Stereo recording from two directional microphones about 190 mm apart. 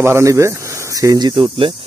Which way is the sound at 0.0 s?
15° right (ahead or behind).